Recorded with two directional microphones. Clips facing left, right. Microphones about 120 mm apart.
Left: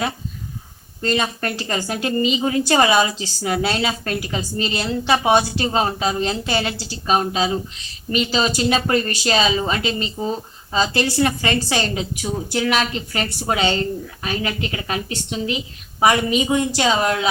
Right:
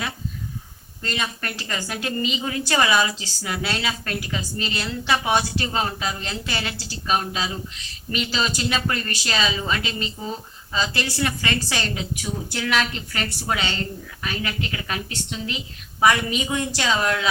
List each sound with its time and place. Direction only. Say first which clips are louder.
1.0 s a woman's voice: left 7 dB; 30° left (ahead or behind)